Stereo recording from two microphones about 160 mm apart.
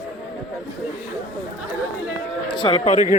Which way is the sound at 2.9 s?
50° left (ahead or behind).